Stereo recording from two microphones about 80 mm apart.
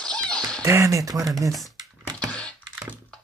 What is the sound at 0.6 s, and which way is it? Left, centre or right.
Speech, right.